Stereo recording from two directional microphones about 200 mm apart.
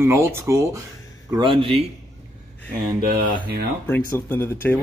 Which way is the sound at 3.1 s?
45° right (ahead or behind).